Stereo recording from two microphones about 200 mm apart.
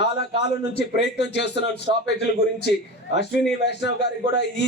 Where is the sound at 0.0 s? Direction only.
60° left (ahead or behind).